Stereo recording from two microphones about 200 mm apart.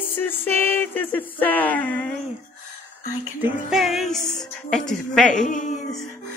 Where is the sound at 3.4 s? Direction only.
Centre (ahead or behind).